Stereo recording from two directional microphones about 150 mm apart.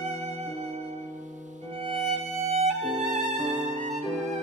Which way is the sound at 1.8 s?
45° right (ahead or behind).